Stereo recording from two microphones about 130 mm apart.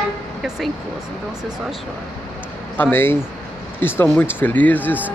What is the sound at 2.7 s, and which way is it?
Speech, 15° left (ahead or behind).